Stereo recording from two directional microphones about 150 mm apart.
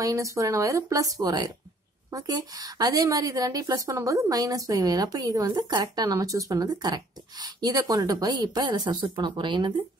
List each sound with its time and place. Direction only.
0.0 s a woman's voice: 20° right (ahead or behind)